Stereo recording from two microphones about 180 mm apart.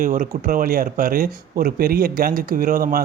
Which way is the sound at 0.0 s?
50° right (ahead or behind).